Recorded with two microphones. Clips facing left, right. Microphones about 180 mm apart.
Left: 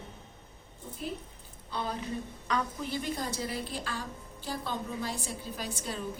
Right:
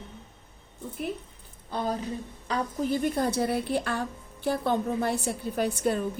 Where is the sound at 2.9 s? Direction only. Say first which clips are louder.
Right 8 dB; 55° right (ahead or behind).